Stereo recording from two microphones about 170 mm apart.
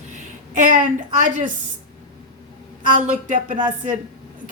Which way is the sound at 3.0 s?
45° right (ahead or behind).